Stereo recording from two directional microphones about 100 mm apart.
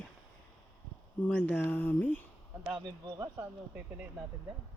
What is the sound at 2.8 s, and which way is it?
Speech, 45° right (ahead or behind).